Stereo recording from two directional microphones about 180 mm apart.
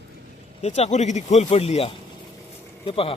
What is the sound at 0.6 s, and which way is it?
Speech, 35° left (ahead or behind).